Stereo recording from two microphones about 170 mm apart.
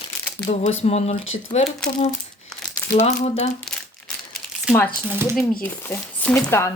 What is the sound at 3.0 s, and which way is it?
Speech, 40° left (ahead or behind).